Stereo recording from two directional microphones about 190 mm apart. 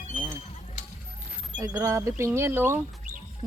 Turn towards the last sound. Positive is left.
turn(degrees=-20)  # may be behind; listen again after turning